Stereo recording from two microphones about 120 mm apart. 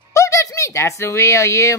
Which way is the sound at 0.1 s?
25° left (ahead or behind).